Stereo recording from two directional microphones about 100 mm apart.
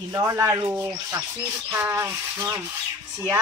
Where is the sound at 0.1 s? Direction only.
30° right (ahead or behind).